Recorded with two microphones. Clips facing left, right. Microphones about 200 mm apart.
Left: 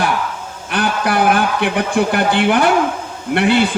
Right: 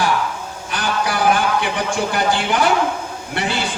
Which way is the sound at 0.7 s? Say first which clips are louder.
Left 4 dB; 60° left (ahead or behind).